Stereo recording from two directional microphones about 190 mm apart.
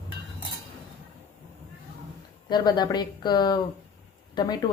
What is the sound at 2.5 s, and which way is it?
Speech, 20° left (ahead or behind).